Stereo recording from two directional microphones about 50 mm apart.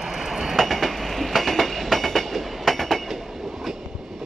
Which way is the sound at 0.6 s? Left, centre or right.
Centre.